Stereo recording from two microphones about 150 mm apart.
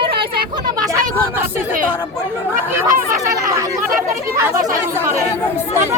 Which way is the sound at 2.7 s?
15° right (ahead or behind).